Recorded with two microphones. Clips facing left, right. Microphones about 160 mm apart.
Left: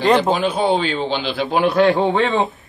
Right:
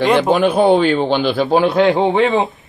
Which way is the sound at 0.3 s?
60° right (ahead or behind).